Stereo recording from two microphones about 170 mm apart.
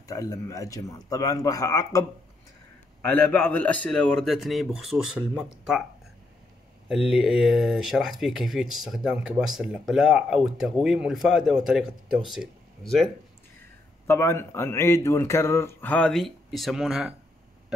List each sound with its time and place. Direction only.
0.1 s speech: 20° left (ahead or behind)
3.1 s speech: 10° left (ahead or behind)
6.9 s speech: 5° right (ahead or behind)
14.0 s speech: 15° left (ahead or behind); by 17.1 s 5° right (ahead or behind)